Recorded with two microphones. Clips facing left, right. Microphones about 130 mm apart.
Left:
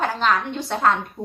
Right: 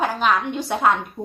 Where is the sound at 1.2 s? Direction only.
20° right (ahead or behind).